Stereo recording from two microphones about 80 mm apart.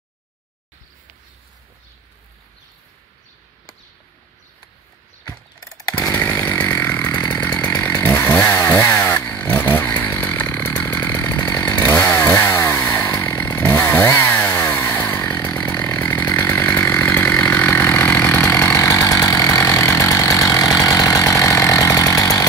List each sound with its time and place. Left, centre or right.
5.6 s chainsaw: left
5.9 s chainsaw: left